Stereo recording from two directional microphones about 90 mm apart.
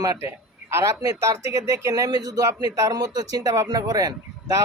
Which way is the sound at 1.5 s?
35° right (ahead or behind).